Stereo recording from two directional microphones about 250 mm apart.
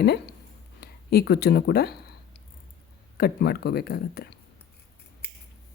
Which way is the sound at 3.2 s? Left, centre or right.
Left.